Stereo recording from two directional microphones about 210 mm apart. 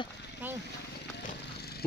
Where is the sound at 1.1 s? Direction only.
50° left (ahead or behind).